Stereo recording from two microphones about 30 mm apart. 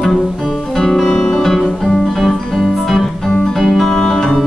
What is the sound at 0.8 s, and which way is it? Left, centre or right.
Music, centre.